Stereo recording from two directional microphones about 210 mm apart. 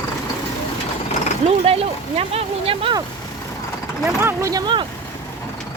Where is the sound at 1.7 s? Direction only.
30° right (ahead or behind).